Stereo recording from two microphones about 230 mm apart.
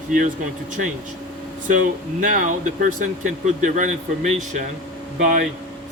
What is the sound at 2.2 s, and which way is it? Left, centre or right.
Speech, right.